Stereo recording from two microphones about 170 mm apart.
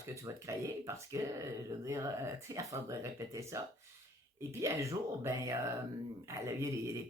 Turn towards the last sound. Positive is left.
turn(degrees=-15)  # may be behind; listen again after turning